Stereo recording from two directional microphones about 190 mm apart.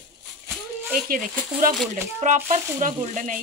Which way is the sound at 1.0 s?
45° right (ahead or behind).